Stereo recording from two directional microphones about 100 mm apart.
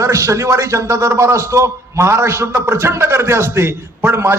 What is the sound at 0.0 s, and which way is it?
A man's voice, 30° right (ahead or behind).